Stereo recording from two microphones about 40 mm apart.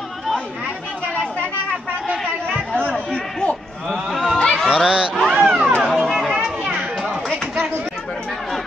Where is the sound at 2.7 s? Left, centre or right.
Left.